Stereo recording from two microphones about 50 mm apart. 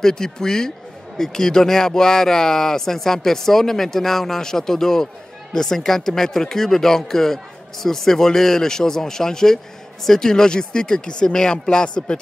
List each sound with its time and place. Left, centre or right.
0.0 s speech: centre